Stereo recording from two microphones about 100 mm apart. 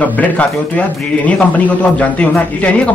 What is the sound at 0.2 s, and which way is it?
A man's voice, 15° left (ahead or behind).